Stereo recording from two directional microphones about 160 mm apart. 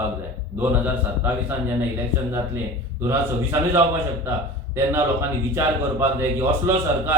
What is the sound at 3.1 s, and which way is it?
A man's voice, 15° right (ahead or behind).